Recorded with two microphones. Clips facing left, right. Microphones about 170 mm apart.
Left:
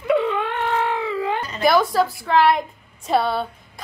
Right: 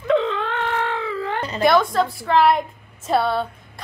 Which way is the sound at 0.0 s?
10° left (ahead or behind).